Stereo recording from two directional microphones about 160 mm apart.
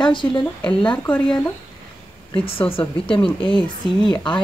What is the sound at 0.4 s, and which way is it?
Speech, 5° left (ahead or behind).